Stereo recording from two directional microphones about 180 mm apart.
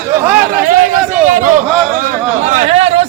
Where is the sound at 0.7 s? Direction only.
50° right (ahead or behind).